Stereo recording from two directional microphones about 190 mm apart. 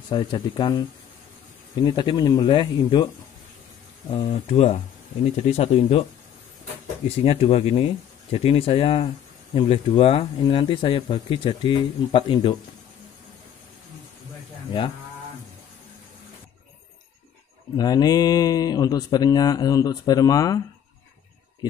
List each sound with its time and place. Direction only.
0.1 s speech: 25° left (ahead or behind)
4.1 s speech: 30° left (ahead or behind)
7.2 s speech: 30° left (ahead or behind)
17.7 s speech: 20° left (ahead or behind)